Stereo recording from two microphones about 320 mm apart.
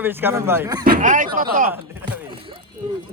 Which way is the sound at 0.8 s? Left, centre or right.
Right.